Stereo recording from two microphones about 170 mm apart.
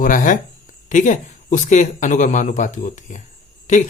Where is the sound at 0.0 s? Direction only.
50° left (ahead or behind).